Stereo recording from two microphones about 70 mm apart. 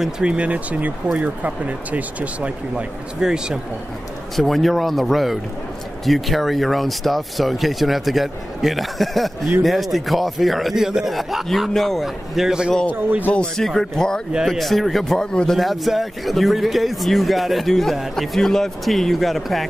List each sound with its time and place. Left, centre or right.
0.0 s speech: centre
2.7 s speech: centre
4.4 s speech: centre
13.6 s speech: centre
14.3 s speech: centre